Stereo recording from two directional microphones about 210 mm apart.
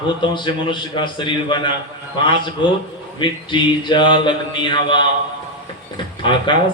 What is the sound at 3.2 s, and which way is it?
A man's voice, 20° left (ahead or behind).